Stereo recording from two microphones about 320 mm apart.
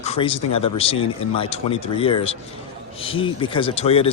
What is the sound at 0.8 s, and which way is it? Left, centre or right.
Speech, centre.